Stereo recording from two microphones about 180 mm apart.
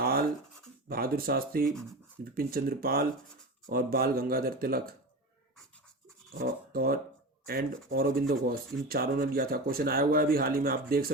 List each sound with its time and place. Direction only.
0.0 s scratch: 55° right (ahead or behind)
0.9 s speech: 55° right (ahead or behind)
6.4 s speech: 55° right (ahead or behind)